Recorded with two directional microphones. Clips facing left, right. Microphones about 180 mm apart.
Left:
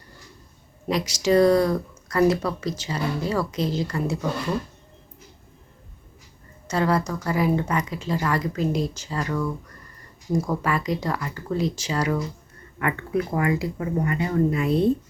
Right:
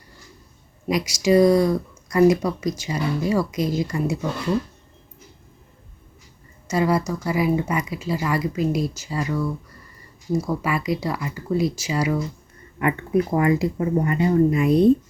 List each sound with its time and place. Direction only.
0.9 s speech: 10° right (ahead or behind)
6.7 s speech: 10° right (ahead or behind)
12.8 s speech: 20° right (ahead or behind)
14.5 s speech: 15° right (ahead or behind)